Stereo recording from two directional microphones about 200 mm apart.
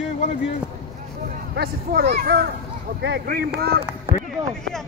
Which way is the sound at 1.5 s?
55° right (ahead or behind).